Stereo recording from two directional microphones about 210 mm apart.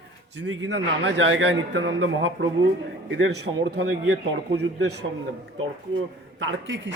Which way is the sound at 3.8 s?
50° right (ahead or behind).